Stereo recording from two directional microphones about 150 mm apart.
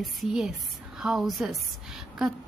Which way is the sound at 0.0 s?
Centre (ahead or behind).